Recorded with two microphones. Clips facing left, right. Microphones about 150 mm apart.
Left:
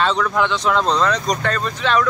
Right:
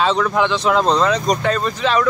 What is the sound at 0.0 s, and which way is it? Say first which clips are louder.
Speech: right 2 dB; 5° right (ahead or behind).